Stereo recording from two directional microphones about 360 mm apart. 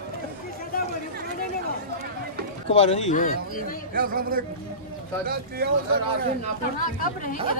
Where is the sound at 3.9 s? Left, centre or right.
Right.